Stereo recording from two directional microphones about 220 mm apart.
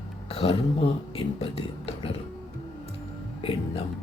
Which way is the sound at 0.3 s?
25° left (ahead or behind).